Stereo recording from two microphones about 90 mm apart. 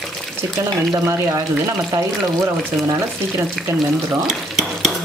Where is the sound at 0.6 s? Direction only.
35° right (ahead or behind).